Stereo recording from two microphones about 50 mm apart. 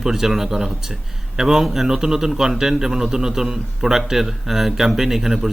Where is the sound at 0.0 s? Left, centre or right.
Centre.